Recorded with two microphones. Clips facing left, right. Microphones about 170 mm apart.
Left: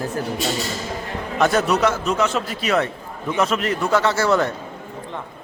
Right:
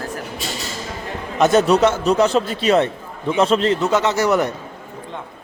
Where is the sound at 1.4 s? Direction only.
20° right (ahead or behind).